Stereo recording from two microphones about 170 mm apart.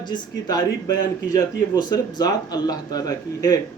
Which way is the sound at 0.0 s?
25° left (ahead or behind).